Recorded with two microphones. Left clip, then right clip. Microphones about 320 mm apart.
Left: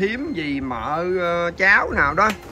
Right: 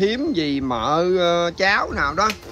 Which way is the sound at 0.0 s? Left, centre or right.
Centre.